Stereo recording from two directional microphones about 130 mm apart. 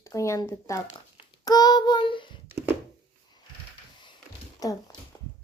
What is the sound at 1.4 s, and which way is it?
Child singing, 30° left (ahead or behind).